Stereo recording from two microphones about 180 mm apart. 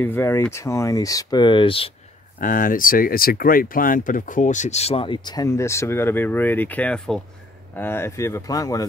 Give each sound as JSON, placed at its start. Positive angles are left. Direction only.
{"t": 0.0, "sound": "speech", "side_deg": 10}
{"t": 2.4, "sound": "speech", "side_deg": 50}